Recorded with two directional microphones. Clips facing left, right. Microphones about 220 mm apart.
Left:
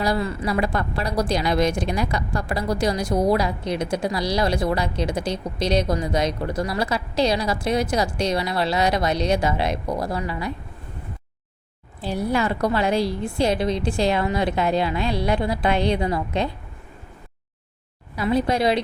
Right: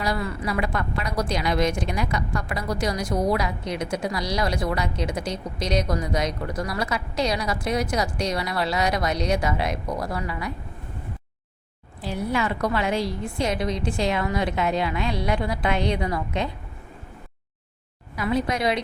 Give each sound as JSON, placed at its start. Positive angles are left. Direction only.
{"t": 0.0, "sound": "a woman's voice", "side_deg": 35}
{"t": 12.0, "sound": "a woman's voice", "side_deg": 35}
{"t": 18.2, "sound": "a woman's voice", "side_deg": 30}